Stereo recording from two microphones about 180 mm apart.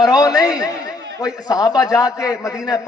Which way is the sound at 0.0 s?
20° left (ahead or behind).